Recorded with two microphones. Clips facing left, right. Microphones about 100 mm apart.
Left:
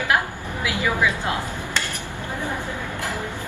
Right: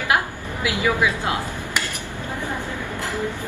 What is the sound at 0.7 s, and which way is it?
Speech, 20° right (ahead or behind).